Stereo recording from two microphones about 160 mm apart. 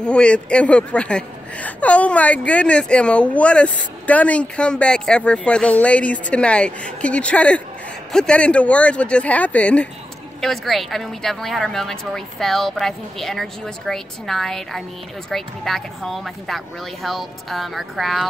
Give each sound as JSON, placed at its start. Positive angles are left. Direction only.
{"t": 0.0, "sound": "a woman's voice", "side_deg": 5}